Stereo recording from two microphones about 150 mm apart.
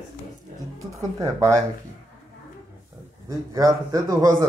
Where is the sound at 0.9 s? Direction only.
20° right (ahead or behind).